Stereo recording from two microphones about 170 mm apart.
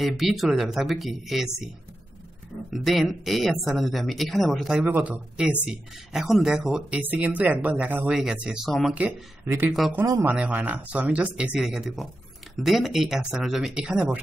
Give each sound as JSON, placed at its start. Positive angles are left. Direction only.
{"t": 0.0, "sound": "speech", "side_deg": 0}
{"t": 2.7, "sound": "speech", "side_deg": 0}
{"t": 10.2, "sound": "speech", "side_deg": -10}